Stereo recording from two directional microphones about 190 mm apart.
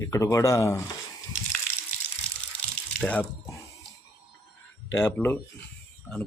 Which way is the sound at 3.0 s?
10° left (ahead or behind).